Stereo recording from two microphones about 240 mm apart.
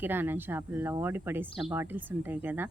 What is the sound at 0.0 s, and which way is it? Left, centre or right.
Speech, centre.